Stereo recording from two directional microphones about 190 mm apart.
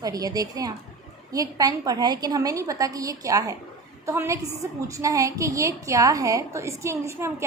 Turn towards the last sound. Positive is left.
turn(degrees=-15)  # may be behind; listen again after turning